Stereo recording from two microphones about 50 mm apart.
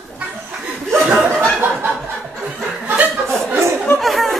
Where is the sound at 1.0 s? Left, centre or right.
Right.